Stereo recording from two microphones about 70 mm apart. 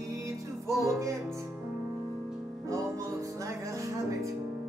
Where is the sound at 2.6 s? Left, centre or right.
Right.